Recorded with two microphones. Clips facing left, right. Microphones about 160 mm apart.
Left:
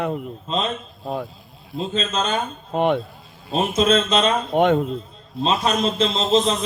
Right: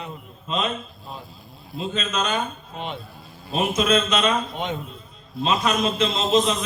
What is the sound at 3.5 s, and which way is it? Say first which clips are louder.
Speech: left 3 dB; 30° left (ahead or behind).